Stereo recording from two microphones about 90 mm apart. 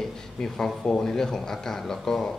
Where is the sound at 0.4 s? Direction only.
5° left (ahead or behind).